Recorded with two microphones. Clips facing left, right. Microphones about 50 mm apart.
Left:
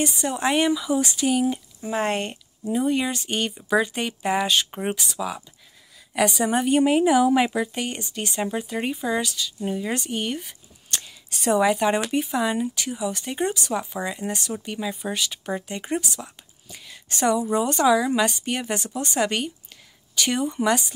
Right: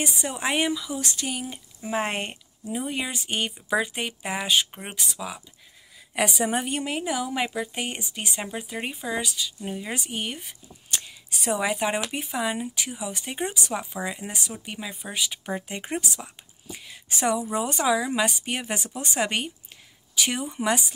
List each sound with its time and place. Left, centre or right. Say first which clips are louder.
0.2 s speech: left 4 dB; centre
1.1 s speech: left 10 dB; centre
1.8 s speech: left 1 dB; centre
4.6 s speech: left 11 dB; centre
4.9 s speech: left 4 dB; centre
6.1 s speech: left 3 dB; centre
6.9 s speech: left 10 dB; centre
7.7 s speech: left 2 dB; centre